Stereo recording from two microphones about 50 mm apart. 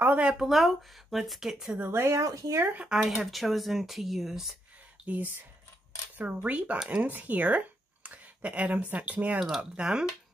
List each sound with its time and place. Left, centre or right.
0.2 s speech: centre
0.5 s speech: centre
1.9 s speech: right
2.8 s speech: centre
3.2 s speech: centre
5.0 s speech: right
9.6 s speech: centre